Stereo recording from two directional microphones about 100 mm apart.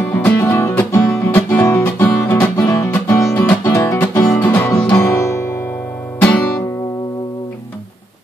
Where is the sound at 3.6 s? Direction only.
30° left (ahead or behind).